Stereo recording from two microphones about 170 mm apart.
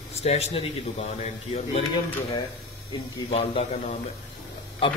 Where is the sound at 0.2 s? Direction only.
40° left (ahead or behind).